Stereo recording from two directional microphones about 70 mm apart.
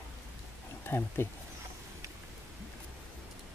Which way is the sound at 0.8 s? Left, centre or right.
Left.